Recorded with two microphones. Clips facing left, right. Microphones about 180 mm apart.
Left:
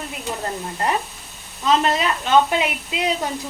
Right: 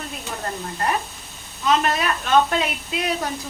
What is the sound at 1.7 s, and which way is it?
Speech, 25° left (ahead or behind).